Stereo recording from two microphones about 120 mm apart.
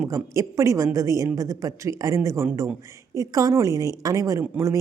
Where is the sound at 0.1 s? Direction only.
25° right (ahead or behind).